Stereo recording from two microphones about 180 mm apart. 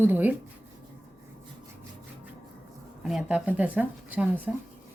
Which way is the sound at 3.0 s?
5° right (ahead or behind).